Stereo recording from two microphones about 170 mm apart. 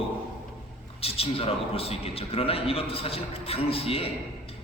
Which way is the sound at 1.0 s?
35° left (ahead or behind).